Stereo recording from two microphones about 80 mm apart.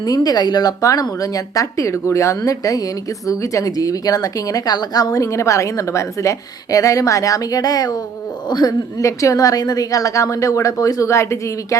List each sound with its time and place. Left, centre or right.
0.0 s speech: left
0.8 s speech: left
9.0 s speech: left